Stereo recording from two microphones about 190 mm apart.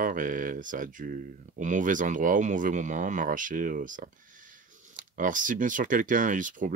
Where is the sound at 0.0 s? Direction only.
45° right (ahead or behind).